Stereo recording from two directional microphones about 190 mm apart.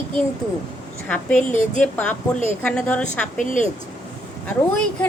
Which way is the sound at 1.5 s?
40° left (ahead or behind).